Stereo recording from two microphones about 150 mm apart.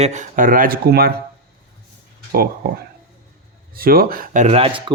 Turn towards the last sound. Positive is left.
turn(degrees=-35)  # may be behind; listen again after turning